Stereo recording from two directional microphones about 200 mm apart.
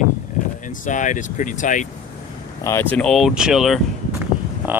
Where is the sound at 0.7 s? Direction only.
40° left (ahead or behind).